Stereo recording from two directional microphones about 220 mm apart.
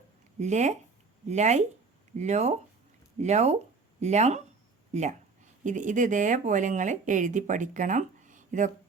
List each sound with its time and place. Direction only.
0.3 s speech: 30° right (ahead or behind)
5.6 s speech: 35° right (ahead or behind)